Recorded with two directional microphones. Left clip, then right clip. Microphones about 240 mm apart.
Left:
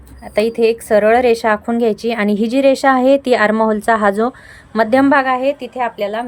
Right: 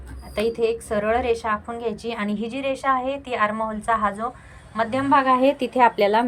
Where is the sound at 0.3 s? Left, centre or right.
Centre.